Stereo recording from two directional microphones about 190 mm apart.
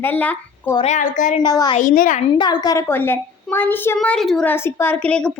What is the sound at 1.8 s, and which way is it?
Speech, 45° left (ahead or behind).